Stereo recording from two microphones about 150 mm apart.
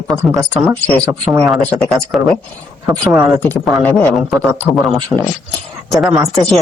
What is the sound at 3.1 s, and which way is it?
Speech, 15° right (ahead or behind).